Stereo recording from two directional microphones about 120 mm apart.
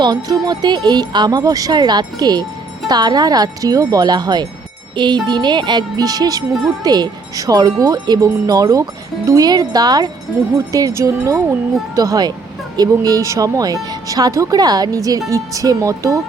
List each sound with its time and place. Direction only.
0.0 s speech: 35° right (ahead or behind)